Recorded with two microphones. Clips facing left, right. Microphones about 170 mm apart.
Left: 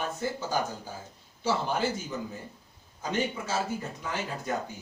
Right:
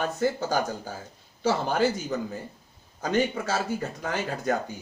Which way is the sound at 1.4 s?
65° right (ahead or behind).